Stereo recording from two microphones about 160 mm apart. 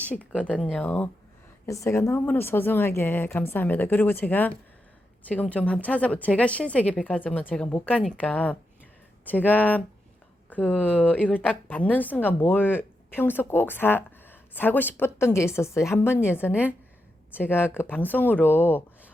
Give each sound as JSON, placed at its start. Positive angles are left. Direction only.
{"t": 0.1, "sound": "speech", "side_deg": 10}
{"t": 16.5, "sound": "a woman's voice", "side_deg": -10}
{"t": 17.3, "sound": "speech", "side_deg": 10}